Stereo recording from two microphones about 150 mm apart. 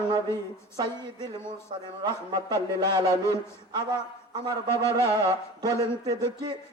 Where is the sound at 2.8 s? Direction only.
30° right (ahead or behind).